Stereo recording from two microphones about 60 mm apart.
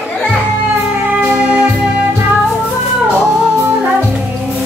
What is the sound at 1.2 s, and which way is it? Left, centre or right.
Music, right.